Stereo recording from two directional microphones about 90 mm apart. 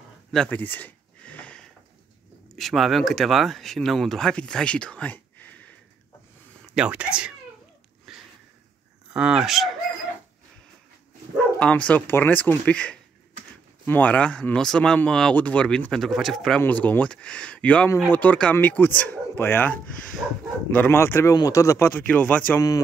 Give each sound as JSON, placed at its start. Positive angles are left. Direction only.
{"t": 0.5, "sound": "a sound", "side_deg": 20}
{"t": 2.5, "sound": "speech", "side_deg": 0}
{"t": 6.7, "sound": "speech", "side_deg": -10}
{"t": 8.1, "sound": "a sound", "side_deg": 0}
{"t": 9.1, "sound": "speech", "side_deg": -10}
{"t": 11.6, "sound": "speech", "side_deg": 15}
{"t": 16.6, "sound": "speech", "side_deg": 20}
{"t": 20.2, "sound": "speech", "side_deg": -15}
{"t": 20.7, "sound": "speech", "side_deg": 25}
{"t": 21.8, "sound": "speech", "side_deg": 15}